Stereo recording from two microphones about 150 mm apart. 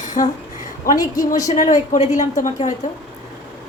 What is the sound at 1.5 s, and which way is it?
A woman's voice, 55° left (ahead or behind).